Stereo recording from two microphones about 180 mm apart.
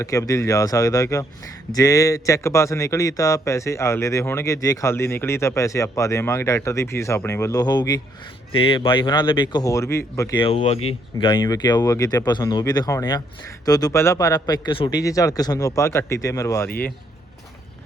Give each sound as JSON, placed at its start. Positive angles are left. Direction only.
{"t": 0.0, "sound": "a man's voice", "side_deg": 20}
{"t": 10.3, "sound": "a man's voice", "side_deg": 35}